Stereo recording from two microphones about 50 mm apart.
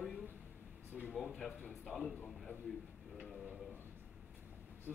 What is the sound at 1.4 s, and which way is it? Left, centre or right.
Speech, left.